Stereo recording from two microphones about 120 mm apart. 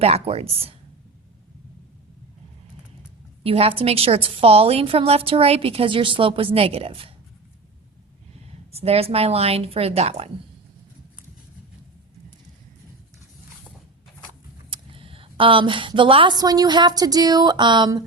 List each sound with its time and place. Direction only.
0.0 s speech: 60° right (ahead or behind)
3.4 s a woman's voice: 50° right (ahead or behind)
8.7 s speech: 55° right (ahead or behind)
14.7 s speech: 50° right (ahead or behind)